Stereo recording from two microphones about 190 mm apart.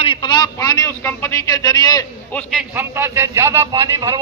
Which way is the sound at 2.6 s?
10° right (ahead or behind).